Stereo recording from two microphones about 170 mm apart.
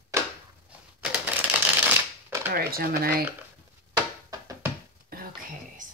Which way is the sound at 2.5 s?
60° right (ahead or behind).